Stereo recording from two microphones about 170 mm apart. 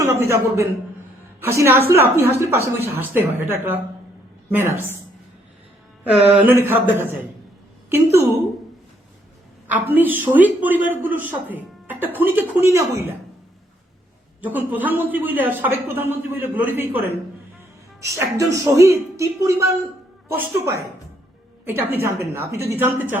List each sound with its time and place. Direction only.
0.0 s a man's voice: 15° right (ahead or behind)
6.3 s a man's voice: 10° right (ahead or behind)
9.6 s a man's voice: 10° right (ahead or behind)
14.4 s a man's voice: 10° right (ahead or behind)